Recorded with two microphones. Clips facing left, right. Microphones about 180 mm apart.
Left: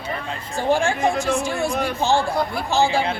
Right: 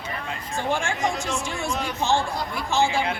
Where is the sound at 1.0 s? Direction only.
55° left (ahead or behind).